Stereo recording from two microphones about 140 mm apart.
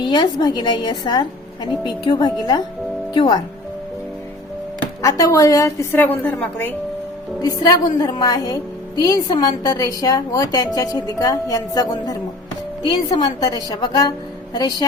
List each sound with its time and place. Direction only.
0.0 s a woman's voice: 35° left (ahead or behind)
4.8 s a woman's voice: 20° left (ahead or behind)
7.4 s a woman's voice: 25° left (ahead or behind)